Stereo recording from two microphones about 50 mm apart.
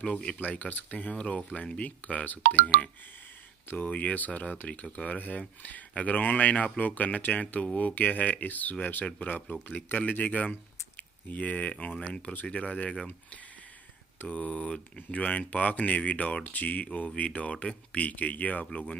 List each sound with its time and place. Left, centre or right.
0.0 s speech: left
0.4 s speech: left
10.5 s a sound: left
12.0 s speech: left